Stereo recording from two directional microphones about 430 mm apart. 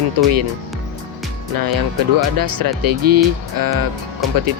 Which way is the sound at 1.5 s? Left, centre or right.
Right.